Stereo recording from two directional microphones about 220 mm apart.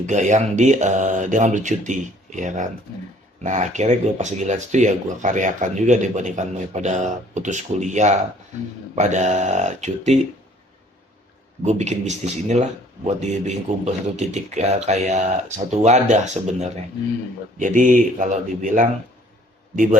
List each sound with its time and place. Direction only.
0.0 s speech: 35° right (ahead or behind)
11.6 s speech: 30° right (ahead or behind)